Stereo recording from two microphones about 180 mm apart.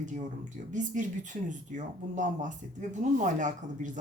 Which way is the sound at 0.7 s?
45° right (ahead or behind).